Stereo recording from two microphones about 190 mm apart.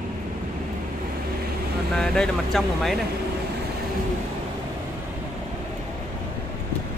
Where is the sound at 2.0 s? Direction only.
Centre (ahead or behind).